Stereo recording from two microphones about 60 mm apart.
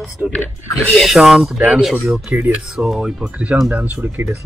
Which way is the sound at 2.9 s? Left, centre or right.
Centre.